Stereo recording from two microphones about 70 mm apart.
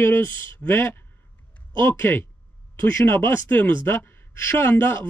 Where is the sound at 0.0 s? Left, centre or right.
Left.